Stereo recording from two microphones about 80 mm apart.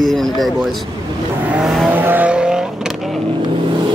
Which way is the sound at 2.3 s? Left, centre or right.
Centre.